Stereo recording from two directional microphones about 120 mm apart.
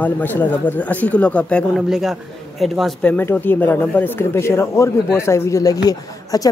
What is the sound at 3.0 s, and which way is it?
Speech, 15° left (ahead or behind).